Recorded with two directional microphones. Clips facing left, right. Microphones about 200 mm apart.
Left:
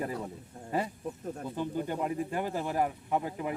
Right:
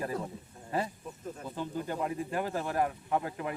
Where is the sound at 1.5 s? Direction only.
15° left (ahead or behind).